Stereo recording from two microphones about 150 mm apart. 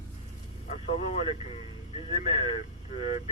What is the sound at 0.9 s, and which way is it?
Speech, 40° left (ahead or behind).